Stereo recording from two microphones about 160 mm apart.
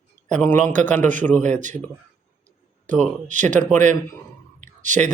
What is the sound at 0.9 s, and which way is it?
Speech, 50° right (ahead or behind).